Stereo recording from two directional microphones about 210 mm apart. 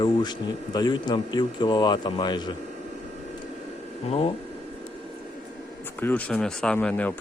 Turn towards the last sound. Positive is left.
turn(degrees=5)  # may be behind; listen again after turning